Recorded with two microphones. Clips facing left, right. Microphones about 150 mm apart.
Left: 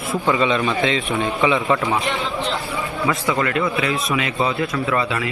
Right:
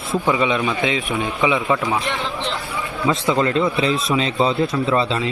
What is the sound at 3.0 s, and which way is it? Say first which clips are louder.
A man's voice: right 3 dB; 25° right (ahead or behind).